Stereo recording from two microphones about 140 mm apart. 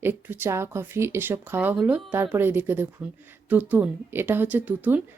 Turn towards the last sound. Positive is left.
turn(degrees=-10)  # may be behind; listen again after turning